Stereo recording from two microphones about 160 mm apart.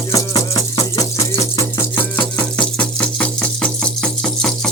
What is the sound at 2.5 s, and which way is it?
Music, 5° left (ahead or behind).